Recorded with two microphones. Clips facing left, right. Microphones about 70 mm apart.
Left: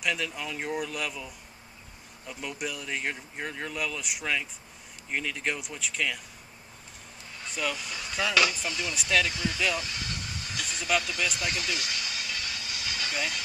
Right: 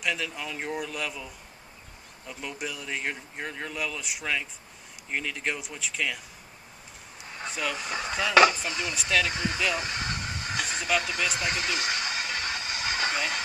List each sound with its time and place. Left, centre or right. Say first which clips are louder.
0.0 s speech: even; centre
7.7 s speech: right 4 dB; right
8.9 s speech: even; centre
9.3 s speech: right 2 dB; right
9.8 s a sound: right 4 dB; right